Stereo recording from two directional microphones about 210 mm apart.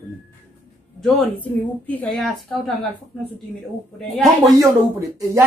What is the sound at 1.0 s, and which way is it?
A child's voice, 5° left (ahead or behind).